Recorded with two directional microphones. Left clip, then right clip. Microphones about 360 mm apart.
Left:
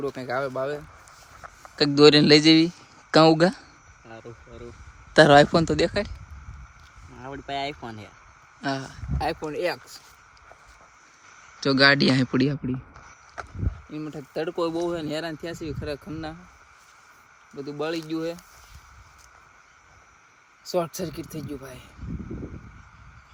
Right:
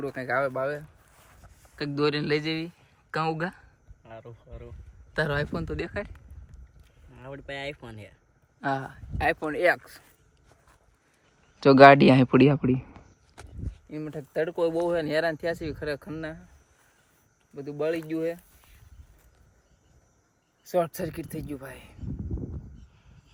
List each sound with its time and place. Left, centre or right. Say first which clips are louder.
0.0 s a man's voice: right 1 dB; centre
7.2 s a man's voice: left 6 dB; centre
11.6 s speech: right 5 dB; centre
13.9 s speech: right 1 dB; centre
17.6 s a man's voice: even; centre
20.7 s a man's voice: even; centre
21.2 s speech: left 1 dB; centre
21.5 s a man's voice: left 1 dB; centre